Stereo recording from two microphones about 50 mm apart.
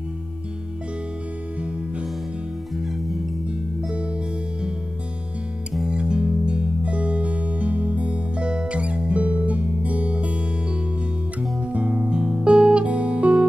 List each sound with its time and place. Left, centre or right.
2.7 s music: centre
5.9 s music: centre